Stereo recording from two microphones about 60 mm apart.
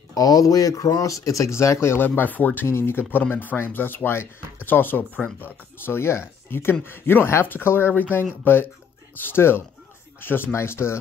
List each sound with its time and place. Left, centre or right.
0.1 s speech: left
2.0 s speech: left
2.6 s speech: left
5.9 s speech: left